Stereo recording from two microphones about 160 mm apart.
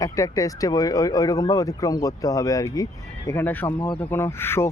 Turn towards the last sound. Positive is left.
turn(degrees=15)  # may be behind; listen again after turning